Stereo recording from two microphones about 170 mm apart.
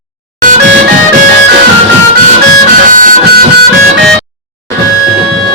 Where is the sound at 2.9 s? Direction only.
50° right (ahead or behind).